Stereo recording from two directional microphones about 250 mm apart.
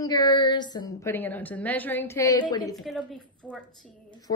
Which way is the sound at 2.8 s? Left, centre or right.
Centre.